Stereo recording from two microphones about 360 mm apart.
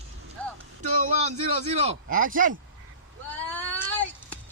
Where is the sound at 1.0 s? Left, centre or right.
Centre.